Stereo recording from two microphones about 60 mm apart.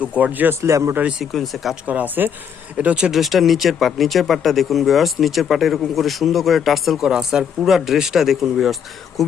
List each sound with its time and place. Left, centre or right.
0.0 s speech: right
0.6 s speech: right
1.2 s speech: centre
1.9 s speech: right
2.7 s speech: centre
3.1 s speech: centre